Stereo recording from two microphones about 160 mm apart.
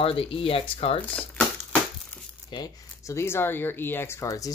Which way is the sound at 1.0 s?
10° left (ahead or behind).